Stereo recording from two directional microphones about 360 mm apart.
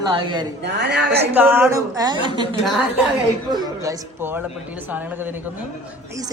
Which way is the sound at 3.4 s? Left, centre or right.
Centre.